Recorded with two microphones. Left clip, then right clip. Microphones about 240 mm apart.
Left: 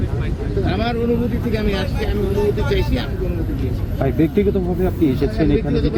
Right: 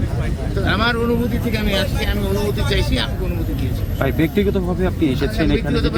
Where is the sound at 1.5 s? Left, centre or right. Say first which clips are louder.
Right 1 dB; centre.